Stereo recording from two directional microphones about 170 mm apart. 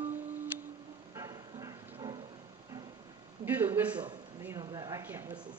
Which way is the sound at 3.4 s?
10° right (ahead or behind).